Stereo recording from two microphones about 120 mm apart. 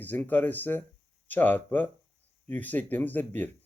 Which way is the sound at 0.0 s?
15° left (ahead or behind).